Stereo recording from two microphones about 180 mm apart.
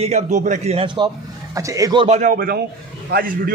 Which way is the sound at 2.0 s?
40° right (ahead or behind).